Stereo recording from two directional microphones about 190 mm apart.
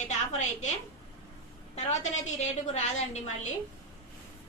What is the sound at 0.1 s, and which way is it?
A woman's voice, 40° left (ahead or behind).